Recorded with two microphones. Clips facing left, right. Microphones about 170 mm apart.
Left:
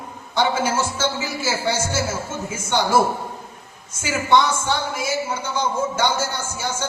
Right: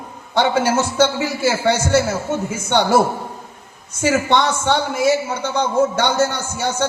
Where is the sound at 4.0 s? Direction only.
60° right (ahead or behind).